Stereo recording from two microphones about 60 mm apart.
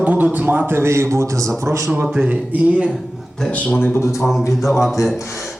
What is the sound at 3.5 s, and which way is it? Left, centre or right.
Speech, left.